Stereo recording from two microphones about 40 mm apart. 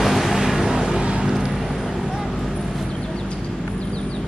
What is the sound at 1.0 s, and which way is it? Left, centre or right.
Vehicle, right.